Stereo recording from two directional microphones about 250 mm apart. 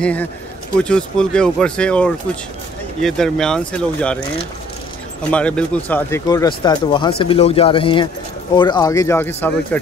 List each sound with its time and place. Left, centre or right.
0.0 s speech: centre
5.3 s speech: centre